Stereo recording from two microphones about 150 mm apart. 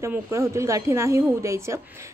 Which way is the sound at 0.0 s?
20° right (ahead or behind).